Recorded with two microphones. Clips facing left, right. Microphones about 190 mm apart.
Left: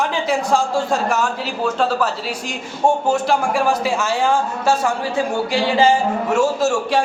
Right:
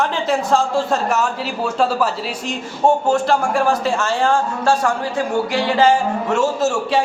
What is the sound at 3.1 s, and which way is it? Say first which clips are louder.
Speech: right 1 dB; centre (ahead or behind).